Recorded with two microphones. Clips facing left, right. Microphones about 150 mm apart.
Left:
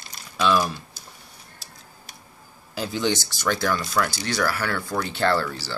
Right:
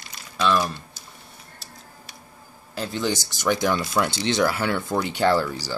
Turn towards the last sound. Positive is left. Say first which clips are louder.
# right 2 dB
turn(degrees=-15)  # may be behind; listen again after turning